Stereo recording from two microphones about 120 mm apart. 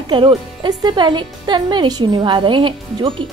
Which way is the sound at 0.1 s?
40° right (ahead or behind).